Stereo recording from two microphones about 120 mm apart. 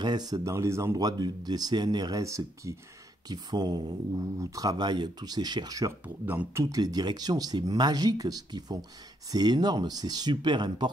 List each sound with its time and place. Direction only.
0.0 s speech: 35° right (ahead or behind)
6.0 s speech: 15° right (ahead or behind)
6.6 s speech: 30° right (ahead or behind)